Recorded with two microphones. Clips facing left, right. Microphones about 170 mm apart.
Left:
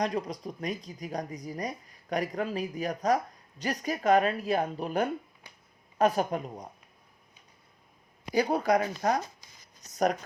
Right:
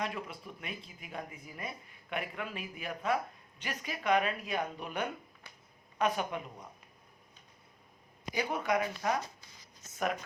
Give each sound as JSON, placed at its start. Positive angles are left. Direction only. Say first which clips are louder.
{"t": 0.0, "sound": "speech", "louder": "left 8 dB", "side_deg": 40}
{"t": 8.3, "sound": "a woman's voice", "louder": "left 7 dB", "side_deg": 35}